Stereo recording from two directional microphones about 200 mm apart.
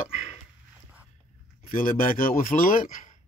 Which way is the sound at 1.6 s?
45° left (ahead or behind).